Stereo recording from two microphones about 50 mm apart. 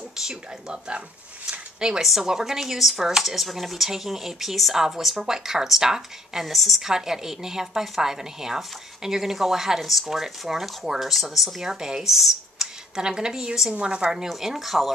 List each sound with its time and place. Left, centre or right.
0.2 s a woman's voice: centre
1.5 s a sound: centre
2.0 s a woman's voice: centre